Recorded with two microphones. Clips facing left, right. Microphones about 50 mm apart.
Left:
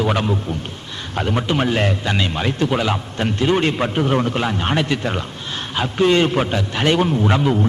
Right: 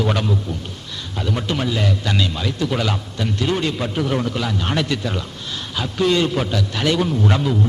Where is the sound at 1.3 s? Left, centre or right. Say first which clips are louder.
Left 3 dB; left.